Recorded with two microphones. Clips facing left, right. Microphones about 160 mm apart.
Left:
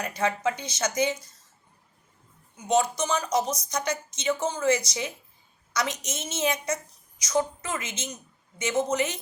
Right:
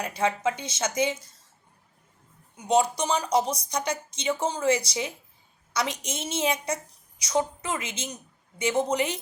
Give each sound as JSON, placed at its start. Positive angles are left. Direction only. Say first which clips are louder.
{"t": 0.0, "sound": "speech", "louder": "right 1 dB", "side_deg": -30}
{"t": 2.6, "sound": "speech", "louder": "right 1 dB", "side_deg": -30}